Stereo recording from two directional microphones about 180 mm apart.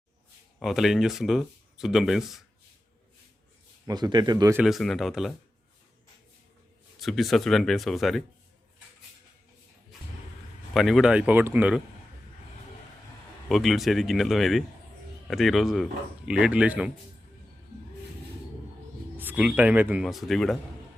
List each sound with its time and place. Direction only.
0.6 s speech: centre (ahead or behind)
3.8 s speech: 20° right (ahead or behind)
4.5 s speech: centre (ahead or behind)
7.0 s speech: centre (ahead or behind)
10.8 s speech: centre (ahead or behind)
13.5 s speech: centre (ahead or behind)
19.1 s speech: 10° right (ahead or behind)